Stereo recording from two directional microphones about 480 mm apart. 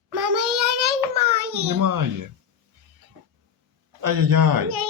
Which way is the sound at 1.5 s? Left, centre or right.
Right.